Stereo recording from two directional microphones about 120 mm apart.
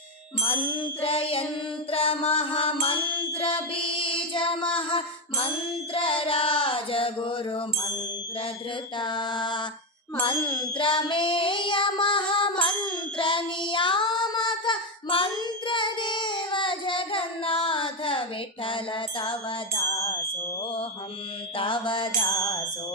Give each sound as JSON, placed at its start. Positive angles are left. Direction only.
{"t": 0.4, "sound": "child singing", "side_deg": 50}
{"t": 3.8, "sound": "female singing", "side_deg": 45}
{"t": 4.8, "sound": "music", "side_deg": 45}
{"t": 5.9, "sound": "child singing", "side_deg": 50}
{"t": 9.0, "sound": "music", "side_deg": 40}
{"t": 15.6, "sound": "child singing", "side_deg": 40}
{"t": 19.7, "sound": "music", "side_deg": 25}
{"t": 21.6, "sound": "music", "side_deg": 40}